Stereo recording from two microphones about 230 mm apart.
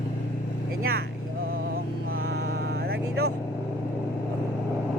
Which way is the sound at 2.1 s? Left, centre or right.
Right.